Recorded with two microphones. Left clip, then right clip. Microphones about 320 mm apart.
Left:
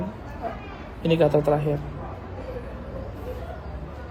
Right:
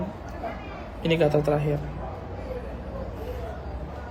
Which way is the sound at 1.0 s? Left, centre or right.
Centre.